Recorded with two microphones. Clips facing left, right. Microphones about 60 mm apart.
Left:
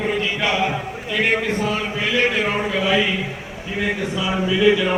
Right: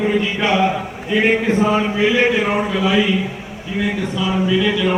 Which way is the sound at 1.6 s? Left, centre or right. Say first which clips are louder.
Right 6 dB; right.